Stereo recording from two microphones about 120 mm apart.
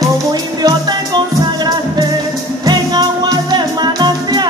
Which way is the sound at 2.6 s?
35° right (ahead or behind).